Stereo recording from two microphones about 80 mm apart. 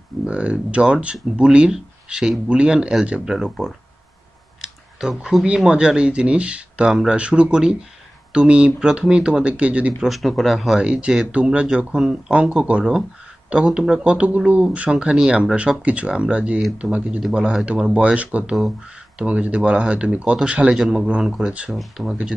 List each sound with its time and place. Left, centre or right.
0.3 s speech: centre
6.9 s speech: centre
7.2 s speech: centre
10.0 s speech: centre
10.8 s speech: centre
20.7 s speech: centre